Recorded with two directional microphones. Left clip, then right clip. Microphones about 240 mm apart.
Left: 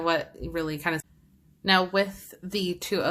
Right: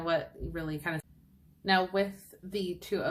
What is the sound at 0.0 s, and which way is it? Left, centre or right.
Speech, left.